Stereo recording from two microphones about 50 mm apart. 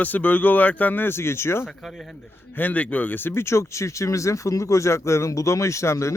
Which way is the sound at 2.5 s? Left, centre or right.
Left.